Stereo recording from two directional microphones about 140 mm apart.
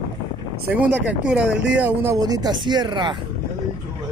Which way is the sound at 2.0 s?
25° right (ahead or behind).